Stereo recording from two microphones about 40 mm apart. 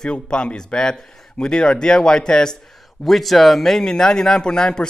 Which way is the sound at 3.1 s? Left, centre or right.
Centre.